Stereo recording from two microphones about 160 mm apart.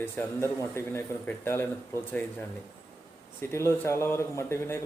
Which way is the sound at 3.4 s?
15° left (ahead or behind).